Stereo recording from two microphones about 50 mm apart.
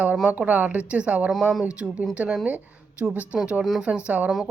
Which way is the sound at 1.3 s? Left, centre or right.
Centre.